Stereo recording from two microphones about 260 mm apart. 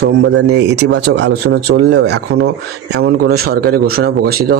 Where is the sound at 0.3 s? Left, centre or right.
Right.